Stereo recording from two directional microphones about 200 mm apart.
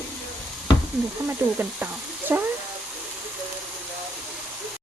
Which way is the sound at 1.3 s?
10° right (ahead or behind).